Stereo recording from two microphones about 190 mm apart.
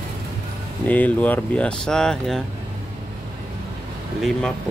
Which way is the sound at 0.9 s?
10° left (ahead or behind).